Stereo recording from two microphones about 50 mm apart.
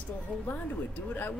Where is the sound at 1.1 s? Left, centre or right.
Left.